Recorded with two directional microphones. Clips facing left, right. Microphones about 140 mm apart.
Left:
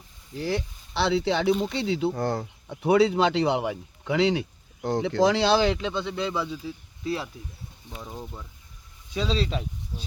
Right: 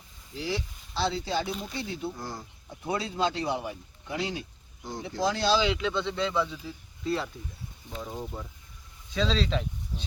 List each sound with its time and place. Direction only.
0.3 s speech: 50° left (ahead or behind)
5.8 s speech: 15° left (ahead or behind)
9.1 s speech: 10° left (ahead or behind)